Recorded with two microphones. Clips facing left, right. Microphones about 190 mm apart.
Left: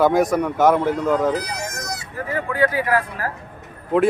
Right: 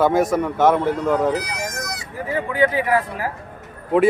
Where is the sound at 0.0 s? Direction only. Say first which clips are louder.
Even; centre (ahead or behind).